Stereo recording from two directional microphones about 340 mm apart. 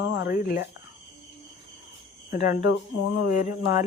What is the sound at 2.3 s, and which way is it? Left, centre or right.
Speech, left.